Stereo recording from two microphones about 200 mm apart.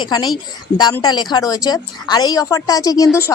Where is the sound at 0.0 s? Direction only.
20° left (ahead or behind).